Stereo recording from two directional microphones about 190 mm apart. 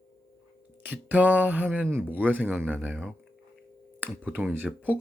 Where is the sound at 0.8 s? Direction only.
10° right (ahead or behind).